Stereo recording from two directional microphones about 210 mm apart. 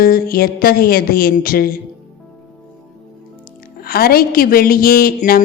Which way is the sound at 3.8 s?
45° left (ahead or behind).